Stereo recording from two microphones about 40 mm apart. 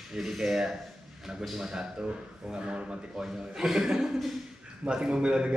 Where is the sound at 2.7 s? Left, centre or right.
Right.